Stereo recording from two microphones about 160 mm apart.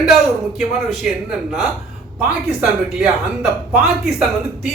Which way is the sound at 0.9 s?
Centre (ahead or behind).